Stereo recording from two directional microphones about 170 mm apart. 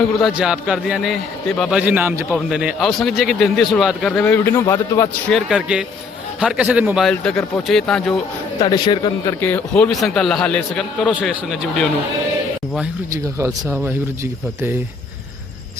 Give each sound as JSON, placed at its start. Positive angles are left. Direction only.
{"t": 0.2, "sound": "a man's voice", "side_deg": 0}
{"t": 1.8, "sound": "a man's voice", "side_deg": -10}
{"t": 5.3, "sound": "a man's voice", "side_deg": -5}
{"t": 7.1, "sound": "a man's voice", "side_deg": 5}
{"t": 8.6, "sound": "speech", "side_deg": 25}
{"t": 9.4, "sound": "a man's voice", "side_deg": 10}
{"t": 13.4, "sound": "speech", "side_deg": -15}